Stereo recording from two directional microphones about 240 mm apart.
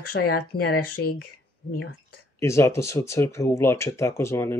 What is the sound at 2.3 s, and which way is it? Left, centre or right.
Speech, centre.